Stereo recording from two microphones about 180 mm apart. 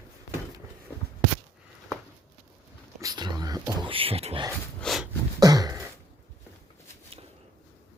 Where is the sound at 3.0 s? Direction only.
20° right (ahead or behind).